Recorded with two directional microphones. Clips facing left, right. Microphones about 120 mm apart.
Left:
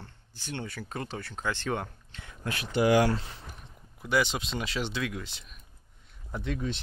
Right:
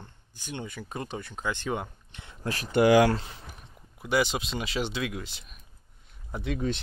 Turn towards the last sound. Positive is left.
turn(degrees=-10)  # may be behind; listen again after turning